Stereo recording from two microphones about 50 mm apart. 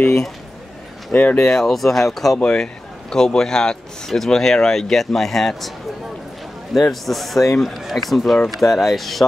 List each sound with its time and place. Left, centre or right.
1.1 s speech: left
1.5 s speech: centre
2.4 s speech: centre
6.7 s speech: centre